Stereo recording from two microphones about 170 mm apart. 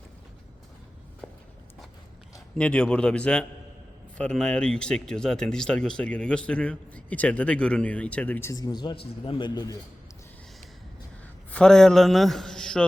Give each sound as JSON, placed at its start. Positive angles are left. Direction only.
{"t": 1.2, "sound": "walk", "side_deg": 0}
{"t": 2.6, "sound": "a man's voice", "side_deg": 5}
{"t": 11.5, "sound": "a man's voice", "side_deg": 5}